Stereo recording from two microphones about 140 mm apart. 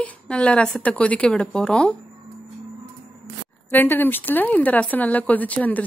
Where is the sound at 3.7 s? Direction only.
15° left (ahead or behind).